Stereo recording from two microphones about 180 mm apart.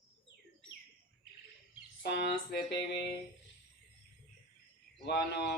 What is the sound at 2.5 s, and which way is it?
Mantra, 60° left (ahead or behind).